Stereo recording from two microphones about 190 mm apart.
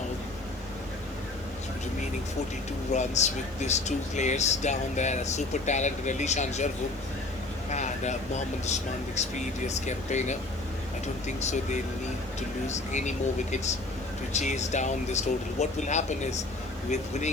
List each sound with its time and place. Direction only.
2.9 s speech: 35° left (ahead or behind)
7.7 s vehicle: 40° left (ahead or behind)
8.6 s speech: 35° left (ahead or behind)